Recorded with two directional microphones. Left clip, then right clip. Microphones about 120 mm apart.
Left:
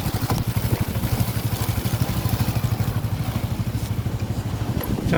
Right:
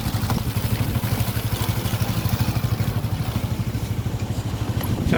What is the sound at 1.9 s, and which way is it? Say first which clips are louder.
Vehicle: right 1 dB; 10° right (ahead or behind).